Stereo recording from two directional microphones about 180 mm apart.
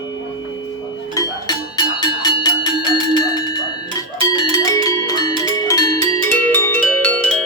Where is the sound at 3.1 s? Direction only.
25° left (ahead or behind).